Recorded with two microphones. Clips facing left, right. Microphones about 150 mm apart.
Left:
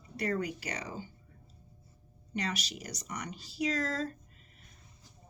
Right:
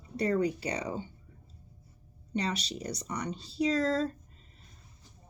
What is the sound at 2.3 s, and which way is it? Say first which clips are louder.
Speech: right 4 dB; 30° right (ahead or behind).